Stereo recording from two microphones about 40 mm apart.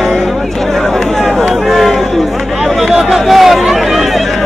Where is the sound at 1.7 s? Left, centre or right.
Centre.